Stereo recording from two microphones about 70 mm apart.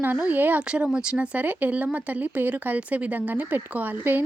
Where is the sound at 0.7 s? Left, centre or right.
Centre.